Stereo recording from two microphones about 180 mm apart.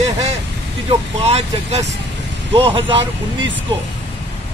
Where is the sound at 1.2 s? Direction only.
35° right (ahead or behind).